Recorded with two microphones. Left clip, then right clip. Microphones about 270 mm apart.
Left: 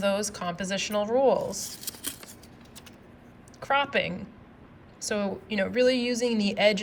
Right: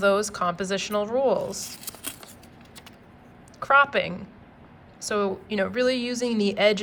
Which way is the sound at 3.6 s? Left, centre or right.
Centre.